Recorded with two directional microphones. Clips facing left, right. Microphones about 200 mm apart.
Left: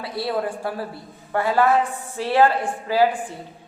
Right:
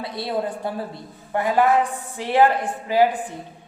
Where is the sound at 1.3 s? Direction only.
15° right (ahead or behind).